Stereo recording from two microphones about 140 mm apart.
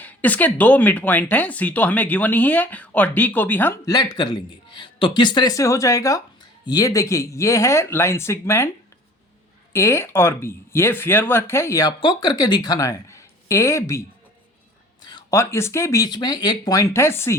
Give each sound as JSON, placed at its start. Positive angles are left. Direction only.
{"t": 0.0, "sound": "speech", "side_deg": 10}
{"t": 3.9, "sound": "a man's voice", "side_deg": 30}
{"t": 9.7, "sound": "a man's voice", "side_deg": 20}
{"t": 15.3, "sound": "a man's voice", "side_deg": 20}